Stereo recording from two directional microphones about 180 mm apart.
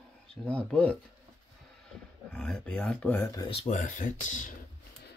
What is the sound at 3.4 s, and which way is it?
Speech, 30° left (ahead or behind).